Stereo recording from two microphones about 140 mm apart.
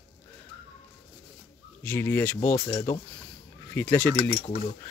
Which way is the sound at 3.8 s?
15° left (ahead or behind).